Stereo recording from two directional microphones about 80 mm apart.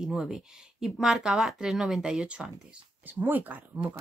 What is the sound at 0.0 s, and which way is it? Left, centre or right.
Speech, centre.